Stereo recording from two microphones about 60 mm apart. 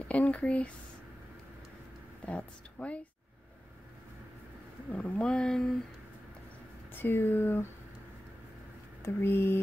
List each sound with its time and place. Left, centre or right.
0.1 s speech: left
2.2 s speech: left
4.9 s speech: left
6.9 s speech: left
9.0 s speech: left